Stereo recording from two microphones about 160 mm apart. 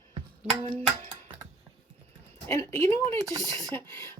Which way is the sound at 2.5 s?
20° left (ahead or behind).